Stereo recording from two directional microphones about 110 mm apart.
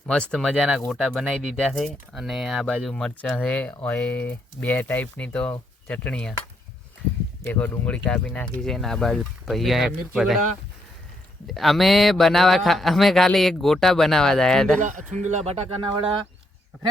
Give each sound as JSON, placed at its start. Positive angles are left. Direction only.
{"t": 0.1, "sound": "speech", "side_deg": 5}
{"t": 0.5, "sound": "a man's voice", "side_deg": -5}
{"t": 7.4, "sound": "a man's voice", "side_deg": 15}
{"t": 11.4, "sound": "a man's voice", "side_deg": 0}
{"t": 15.2, "sound": "speech", "side_deg": -90}